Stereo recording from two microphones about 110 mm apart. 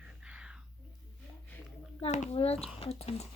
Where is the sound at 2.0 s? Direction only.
75° left (ahead or behind).